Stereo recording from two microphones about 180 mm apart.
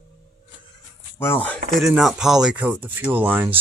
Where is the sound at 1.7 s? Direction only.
Centre (ahead or behind).